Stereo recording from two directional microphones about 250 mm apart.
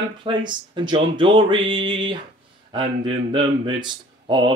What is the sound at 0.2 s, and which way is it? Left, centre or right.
Speech, centre.